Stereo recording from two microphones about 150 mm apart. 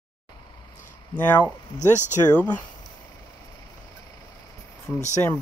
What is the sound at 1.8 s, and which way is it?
Speech, 55° left (ahead or behind).